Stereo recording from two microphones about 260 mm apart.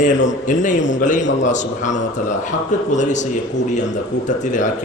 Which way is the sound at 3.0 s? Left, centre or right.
Left.